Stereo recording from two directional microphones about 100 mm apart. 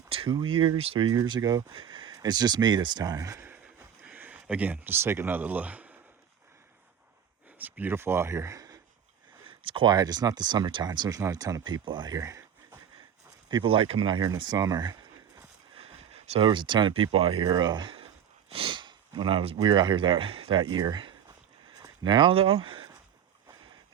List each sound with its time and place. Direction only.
0.3 s speech: 50° right (ahead or behind)
1.0 s speech: 45° right (ahead or behind)
1.7 s speech: 55° right (ahead or behind); by 3.4 s 35° right (ahead or behind)
3.4 s a sound: 20° right (ahead or behind)
7.6 s speech: 20° right (ahead or behind); by 8.8 s 35° right (ahead or behind)
9.5 s a sound: 60° right (ahead or behind)
9.9 s speech: 40° right (ahead or behind)
13.5 s speech: 55° right (ahead or behind)
15.8 s a sound: 85° right
16.5 s speech: 50° right (ahead or behind); by 17.3 s 65° right (ahead or behind)
17.4 s speech: 45° right (ahead or behind); by 19.5 s 65° right (ahead or behind)
19.5 s speech: 45° right (ahead or behind)